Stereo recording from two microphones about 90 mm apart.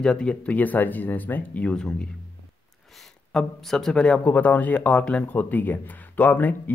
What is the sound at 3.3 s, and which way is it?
Speech, 5° left (ahead or behind).